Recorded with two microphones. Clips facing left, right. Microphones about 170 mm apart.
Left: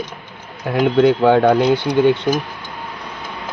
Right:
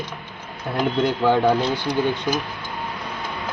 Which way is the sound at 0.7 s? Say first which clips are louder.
Left 8 dB; 75° left (ahead or behind).